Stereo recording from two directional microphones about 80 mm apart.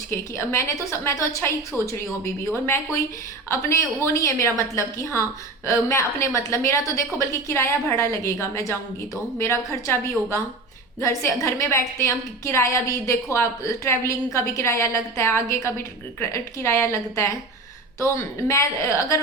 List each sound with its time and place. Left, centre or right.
0.1 s a woman's voice: left
11.0 s a woman's voice: left